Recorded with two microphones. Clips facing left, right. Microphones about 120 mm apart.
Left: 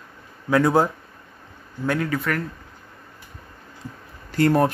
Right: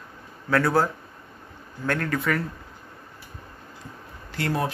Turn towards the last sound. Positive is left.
turn(degrees=45)  # may be behind; listen again after turning